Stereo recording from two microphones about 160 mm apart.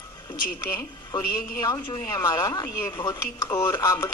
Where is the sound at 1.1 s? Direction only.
30° left (ahead or behind).